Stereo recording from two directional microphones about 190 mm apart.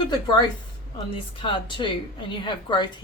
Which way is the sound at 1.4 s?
25° left (ahead or behind).